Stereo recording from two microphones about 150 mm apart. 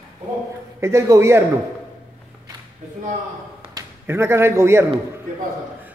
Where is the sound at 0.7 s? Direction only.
20° right (ahead or behind).